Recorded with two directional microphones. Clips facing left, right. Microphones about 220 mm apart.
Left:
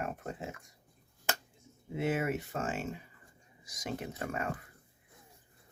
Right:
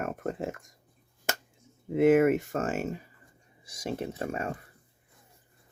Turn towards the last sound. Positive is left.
turn(degrees=-30)  # may be behind; listen again after turning